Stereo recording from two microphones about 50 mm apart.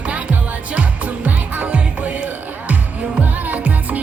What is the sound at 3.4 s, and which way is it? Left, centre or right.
Music, right.